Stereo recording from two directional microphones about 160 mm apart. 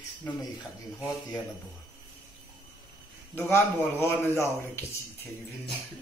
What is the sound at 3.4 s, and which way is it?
A man's voice, 15° left (ahead or behind).